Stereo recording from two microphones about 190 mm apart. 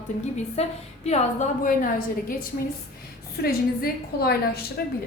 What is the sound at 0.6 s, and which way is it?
A woman's voice, 35° left (ahead or behind).